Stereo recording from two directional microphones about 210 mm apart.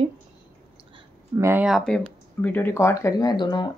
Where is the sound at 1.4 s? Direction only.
10° right (ahead or behind).